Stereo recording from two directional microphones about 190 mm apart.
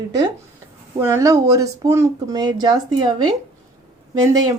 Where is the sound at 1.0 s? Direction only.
15° right (ahead or behind).